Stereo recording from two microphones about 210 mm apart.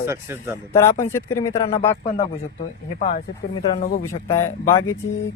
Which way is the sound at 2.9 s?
40° left (ahead or behind).